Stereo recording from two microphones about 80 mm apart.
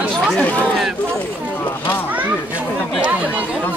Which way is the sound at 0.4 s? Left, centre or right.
Centre.